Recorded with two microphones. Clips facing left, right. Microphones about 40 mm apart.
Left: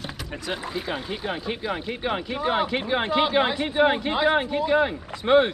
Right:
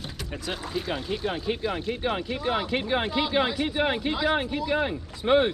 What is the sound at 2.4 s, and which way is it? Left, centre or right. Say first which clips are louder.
Speech: left 7 dB; left.